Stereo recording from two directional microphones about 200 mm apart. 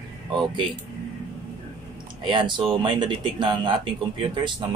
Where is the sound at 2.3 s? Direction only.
25° right (ahead or behind).